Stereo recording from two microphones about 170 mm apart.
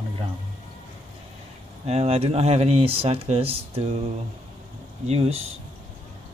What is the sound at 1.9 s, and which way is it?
Speech, 35° right (ahead or behind).